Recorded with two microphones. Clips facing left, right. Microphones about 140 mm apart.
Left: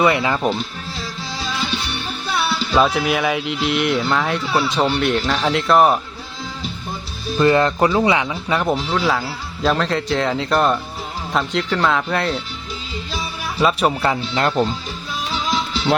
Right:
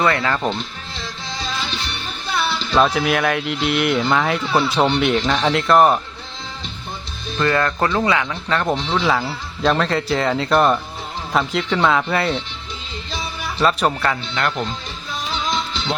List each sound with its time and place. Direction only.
0.0 s speech: 15° left (ahead or behind)
2.4 s speech: 5° left (ahead or behind)
7.3 s speech: 20° left (ahead or behind); by 12.4 s centre (ahead or behind)
13.6 s speech: 5° left (ahead or behind)
14.1 s speech: 25° left (ahead or behind)
15.3 s music: 5° left (ahead or behind)